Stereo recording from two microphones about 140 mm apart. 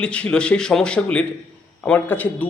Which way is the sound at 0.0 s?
10° left (ahead or behind).